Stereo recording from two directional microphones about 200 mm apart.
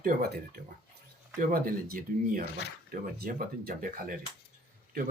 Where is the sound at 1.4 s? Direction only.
45° right (ahead or behind).